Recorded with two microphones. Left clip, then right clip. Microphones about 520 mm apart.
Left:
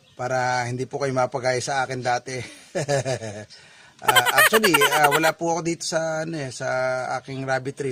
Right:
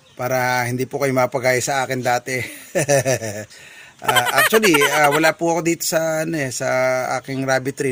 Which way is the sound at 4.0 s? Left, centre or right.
Centre.